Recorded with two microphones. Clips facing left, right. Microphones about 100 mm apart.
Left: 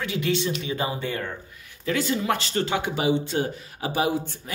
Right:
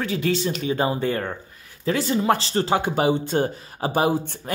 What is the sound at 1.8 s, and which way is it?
Speech, 35° right (ahead or behind).